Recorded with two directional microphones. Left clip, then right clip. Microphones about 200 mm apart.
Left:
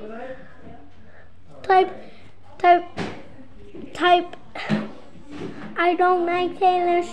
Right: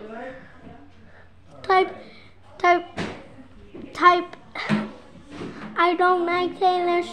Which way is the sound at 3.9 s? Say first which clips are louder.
Right 1 dB; 10° right (ahead or behind).